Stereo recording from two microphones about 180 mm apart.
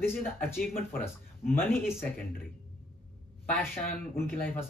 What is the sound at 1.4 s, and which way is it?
Speech, 10° left (ahead or behind).